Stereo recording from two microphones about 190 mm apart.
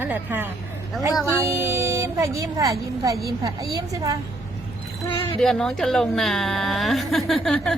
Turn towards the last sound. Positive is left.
turn(degrees=0)  # may be behind; listen again after turning